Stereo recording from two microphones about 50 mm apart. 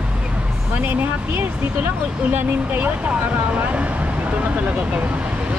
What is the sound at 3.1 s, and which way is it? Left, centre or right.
Speech, right.